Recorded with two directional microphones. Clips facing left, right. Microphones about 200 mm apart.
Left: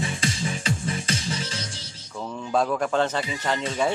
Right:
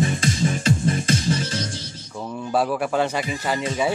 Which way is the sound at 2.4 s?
10° right (ahead or behind).